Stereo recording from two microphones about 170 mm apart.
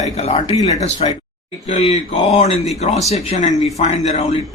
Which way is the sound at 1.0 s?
35° left (ahead or behind).